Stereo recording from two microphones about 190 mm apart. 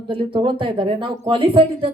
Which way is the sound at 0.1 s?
30° right (ahead or behind).